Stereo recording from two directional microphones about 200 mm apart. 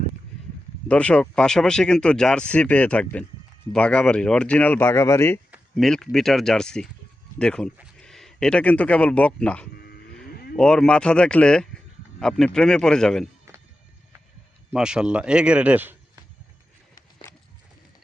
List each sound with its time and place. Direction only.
0.9 s speech: 5° left (ahead or behind)
5.5 s speech: centre (ahead or behind)
9.7 s cattle: 50° left (ahead or behind)
10.6 s speech: 5° left (ahead or behind)
13.5 s a sound: 15° right (ahead or behind)
14.7 s speech: 5° right (ahead or behind)